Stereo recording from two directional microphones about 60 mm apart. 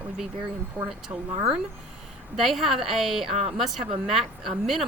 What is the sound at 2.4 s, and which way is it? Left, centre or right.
A woman's voice, centre.